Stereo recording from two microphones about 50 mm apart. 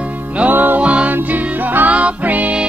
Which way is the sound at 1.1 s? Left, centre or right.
Right.